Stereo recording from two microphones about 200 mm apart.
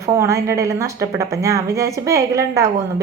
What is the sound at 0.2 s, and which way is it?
A woman's voice, 15° right (ahead or behind).